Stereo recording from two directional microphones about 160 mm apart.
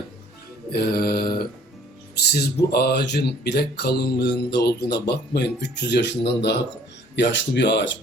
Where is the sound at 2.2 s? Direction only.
75° left (ahead or behind).